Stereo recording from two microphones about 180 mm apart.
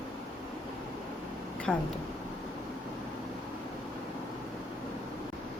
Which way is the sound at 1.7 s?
5° left (ahead or behind).